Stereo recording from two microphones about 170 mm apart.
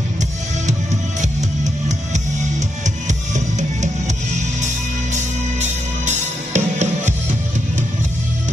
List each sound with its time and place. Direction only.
3.1 s music: 45° right (ahead or behind)